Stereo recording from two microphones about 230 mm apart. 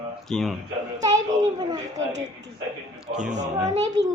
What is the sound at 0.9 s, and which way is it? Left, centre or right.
Speech, centre.